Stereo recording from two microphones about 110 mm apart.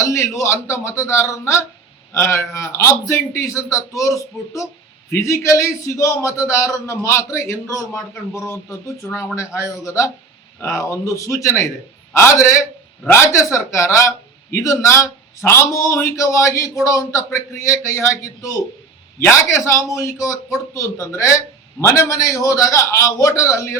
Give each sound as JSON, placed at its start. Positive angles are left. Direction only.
{"t": 0.0, "sound": "a man's voice", "side_deg": 25}